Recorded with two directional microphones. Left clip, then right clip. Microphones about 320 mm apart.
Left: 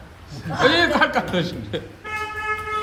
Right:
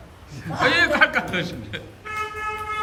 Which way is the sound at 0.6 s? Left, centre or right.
Centre.